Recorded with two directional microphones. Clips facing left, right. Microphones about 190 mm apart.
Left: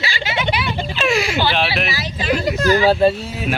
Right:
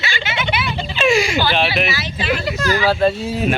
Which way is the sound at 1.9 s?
40° left (ahead or behind).